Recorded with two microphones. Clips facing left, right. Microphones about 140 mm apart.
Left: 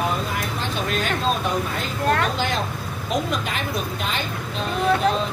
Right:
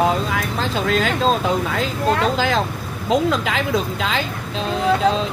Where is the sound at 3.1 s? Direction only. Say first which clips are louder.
Right 7 dB; 90° right.